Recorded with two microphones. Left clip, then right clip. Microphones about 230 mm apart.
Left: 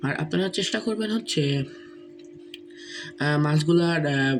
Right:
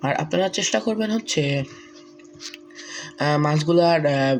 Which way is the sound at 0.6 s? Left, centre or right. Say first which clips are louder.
Right 5 dB; right.